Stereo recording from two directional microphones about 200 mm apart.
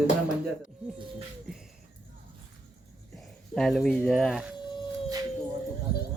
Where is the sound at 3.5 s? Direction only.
Centre (ahead or behind).